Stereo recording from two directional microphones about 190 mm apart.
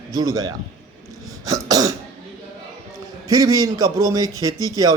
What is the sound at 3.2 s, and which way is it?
A man's voice, 20° right (ahead or behind).